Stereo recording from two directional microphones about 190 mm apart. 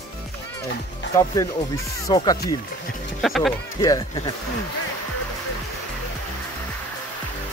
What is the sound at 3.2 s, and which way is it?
Speech, centre (ahead or behind).